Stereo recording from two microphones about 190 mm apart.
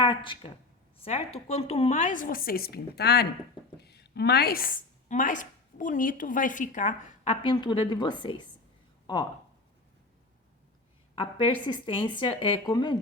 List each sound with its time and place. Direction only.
0.0 s a woman's voice: 25° left (ahead or behind); by 7.3 s 40° left (ahead or behind)
7.4 s speech: 25° left (ahead or behind)
11.1 s speech: 25° left (ahead or behind)